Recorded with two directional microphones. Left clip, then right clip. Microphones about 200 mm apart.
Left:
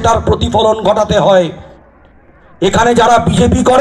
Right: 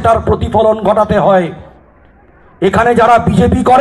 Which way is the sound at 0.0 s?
40° left (ahead or behind).